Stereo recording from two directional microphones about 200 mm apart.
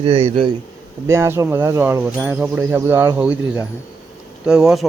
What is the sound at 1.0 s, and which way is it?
Speech, 15° right (ahead or behind).